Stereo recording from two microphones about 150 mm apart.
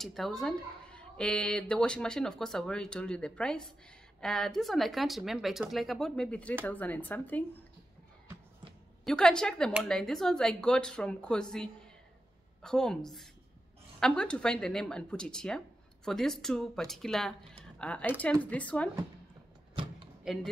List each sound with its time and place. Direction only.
0.0 s speech: centre (ahead or behind)
9.0 s speech: 5° left (ahead or behind)
20.3 s speech: 5° right (ahead or behind)